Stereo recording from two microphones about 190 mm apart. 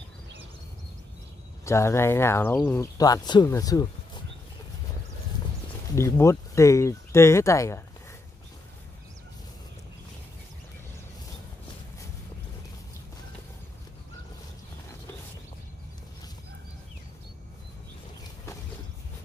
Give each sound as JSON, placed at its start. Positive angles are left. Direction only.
{"t": 1.6, "sound": "speech", "side_deg": 15}
{"t": 5.9, "sound": "speech", "side_deg": 15}